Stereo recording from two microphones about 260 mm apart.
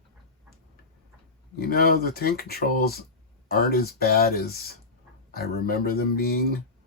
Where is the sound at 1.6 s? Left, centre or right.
Left.